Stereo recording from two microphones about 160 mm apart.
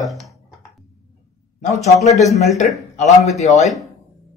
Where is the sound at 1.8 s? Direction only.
45° left (ahead or behind).